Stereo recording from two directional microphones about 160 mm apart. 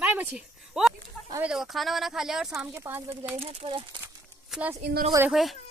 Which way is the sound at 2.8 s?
15° right (ahead or behind).